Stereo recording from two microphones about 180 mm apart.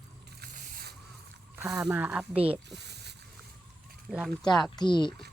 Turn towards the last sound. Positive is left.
turn(degrees=25)  # may be behind; listen again after turning